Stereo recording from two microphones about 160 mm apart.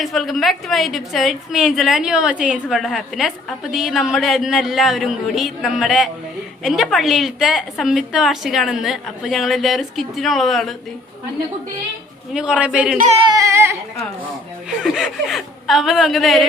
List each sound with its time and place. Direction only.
0.0 s a woman's voice: centre (ahead or behind)
12.3 s a man's voice: 5° right (ahead or behind)
13.3 s a man's voice: 20° right (ahead or behind)
14.8 s a woman's voice: 5° right (ahead or behind)